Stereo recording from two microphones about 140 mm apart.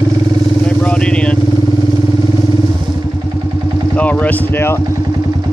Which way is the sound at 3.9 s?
10° left (ahead or behind).